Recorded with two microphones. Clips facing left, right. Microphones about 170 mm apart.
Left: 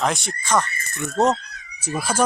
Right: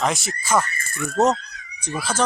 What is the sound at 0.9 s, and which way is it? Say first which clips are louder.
Speech: right 1 dB; 20° left (ahead or behind).